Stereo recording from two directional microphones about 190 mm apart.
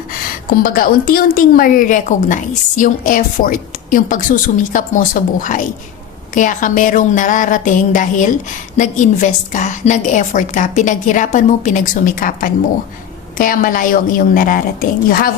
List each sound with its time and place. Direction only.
0.6 s a woman's voice: 50° left (ahead or behind)